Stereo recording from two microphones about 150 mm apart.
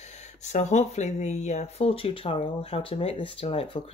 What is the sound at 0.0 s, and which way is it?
Speech, 50° left (ahead or behind).